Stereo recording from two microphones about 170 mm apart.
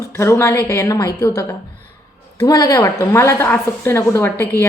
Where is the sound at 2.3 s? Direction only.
20° left (ahead or behind).